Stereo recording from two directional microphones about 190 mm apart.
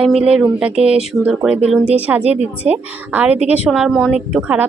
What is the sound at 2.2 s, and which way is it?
Speech, 35° right (ahead or behind).